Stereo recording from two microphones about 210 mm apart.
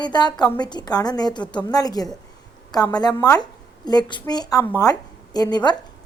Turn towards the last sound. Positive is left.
turn(degrees=20)  # may be behind; listen again after turning